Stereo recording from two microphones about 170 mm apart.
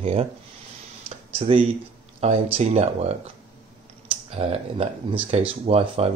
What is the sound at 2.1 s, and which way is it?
Speech, 35° right (ahead or behind).